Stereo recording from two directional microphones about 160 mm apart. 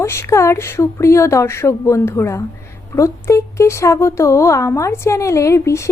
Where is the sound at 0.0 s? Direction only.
15° left (ahead or behind).